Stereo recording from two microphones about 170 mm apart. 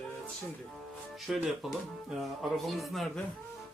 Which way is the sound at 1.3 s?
Centre (ahead or behind).